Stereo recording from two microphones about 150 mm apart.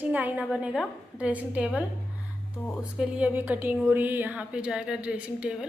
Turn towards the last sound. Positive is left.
turn(degrees=-5)  # may be behind; listen again after turning